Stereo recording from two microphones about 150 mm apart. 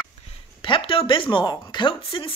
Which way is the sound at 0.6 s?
35° left (ahead or behind).